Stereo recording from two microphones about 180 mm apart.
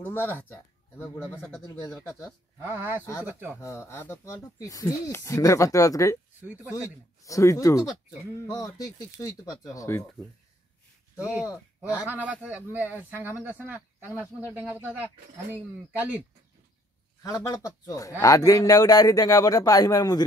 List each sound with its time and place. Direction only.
0.0 s speech: 10° left (ahead or behind)
2.6 s speech: 10° right (ahead or behind)
3.0 s speech: 15° left (ahead or behind)
3.3 s speech: 10° right (ahead or behind)
3.6 s speech: 15° left (ahead or behind)
6.4 s speech: 10° right (ahead or behind)
6.7 s speech: 20° left (ahead or behind)
11.9 s speech: 10° right (ahead or behind)
17.2 s speech: 20° left (ahead or behind)